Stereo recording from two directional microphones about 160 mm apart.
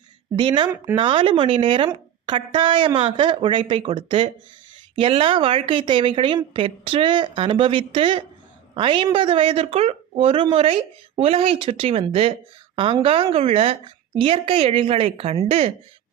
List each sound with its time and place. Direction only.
0.3 s a woman's voice: 30° right (ahead or behind)